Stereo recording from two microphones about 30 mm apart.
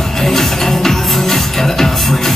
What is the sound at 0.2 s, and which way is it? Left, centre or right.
Music, centre.